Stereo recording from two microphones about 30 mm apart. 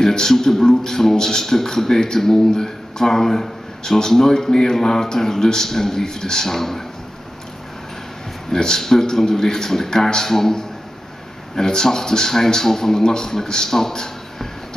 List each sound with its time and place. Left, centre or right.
0.0 s speech: centre
8.5 s a man's voice: centre